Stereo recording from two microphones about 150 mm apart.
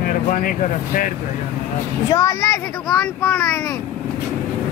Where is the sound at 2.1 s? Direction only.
20° left (ahead or behind).